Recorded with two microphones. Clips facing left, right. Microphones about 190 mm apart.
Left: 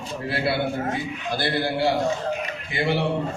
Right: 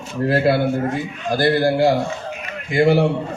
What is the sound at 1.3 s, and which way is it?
A man's voice, 45° right (ahead or behind).